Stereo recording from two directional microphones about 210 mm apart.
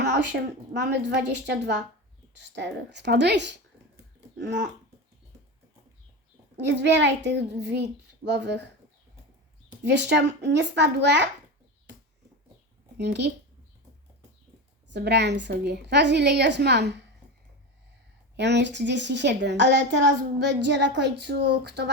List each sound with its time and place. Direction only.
0.7 s a woman's voice: 55° right (ahead or behind)
6.7 s a woman's voice: 55° right (ahead or behind)
9.8 s a woman's voice: 55° right (ahead or behind)
13.0 s a woman's voice: 55° right (ahead or behind)
14.8 s a woman's voice: 55° right (ahead or behind)
18.3 s a woman's voice: 55° right (ahead or behind)